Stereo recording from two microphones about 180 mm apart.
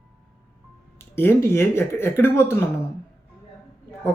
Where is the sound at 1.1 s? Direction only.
15° left (ahead or behind).